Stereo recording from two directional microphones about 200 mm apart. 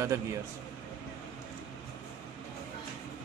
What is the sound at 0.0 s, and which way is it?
Speech, 15° right (ahead or behind).